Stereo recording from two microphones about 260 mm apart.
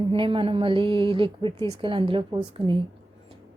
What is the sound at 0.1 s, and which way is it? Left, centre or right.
A woman's voice, centre.